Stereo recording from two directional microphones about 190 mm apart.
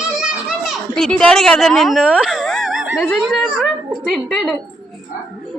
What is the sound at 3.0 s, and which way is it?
A woman's voice, centre (ahead or behind).